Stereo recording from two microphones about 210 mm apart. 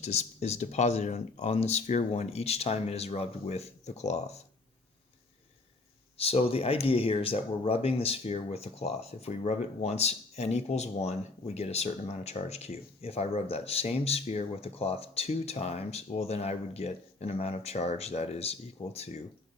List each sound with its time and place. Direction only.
0.0 s speech: 30° left (ahead or behind)
6.1 s speech: 30° left (ahead or behind)